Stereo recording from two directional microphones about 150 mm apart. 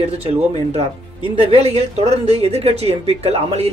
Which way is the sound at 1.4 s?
45° right (ahead or behind).